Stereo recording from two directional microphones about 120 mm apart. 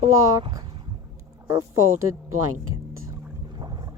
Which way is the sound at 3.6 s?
35° right (ahead or behind).